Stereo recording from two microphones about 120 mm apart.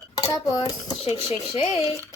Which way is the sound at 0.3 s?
30° left (ahead or behind).